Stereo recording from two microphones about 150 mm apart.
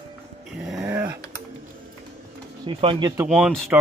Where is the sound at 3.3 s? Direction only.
Centre (ahead or behind).